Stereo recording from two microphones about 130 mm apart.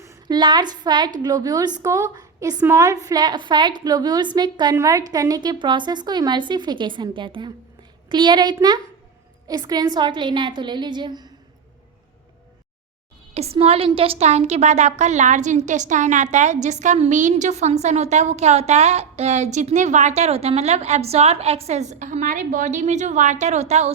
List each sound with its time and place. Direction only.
0.0 s a sound: 25° right (ahead or behind)
0.3 s a woman's voice: 35° right (ahead or behind)
13.3 s a woman's voice: 50° right (ahead or behind)